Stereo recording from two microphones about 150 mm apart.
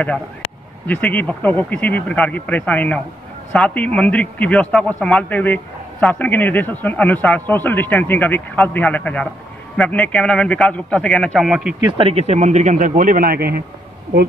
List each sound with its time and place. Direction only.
0.8 s a man's voice: 10° left (ahead or behind)
12.0 s speech: 40° right (ahead or behind); by 13.6 s 90° right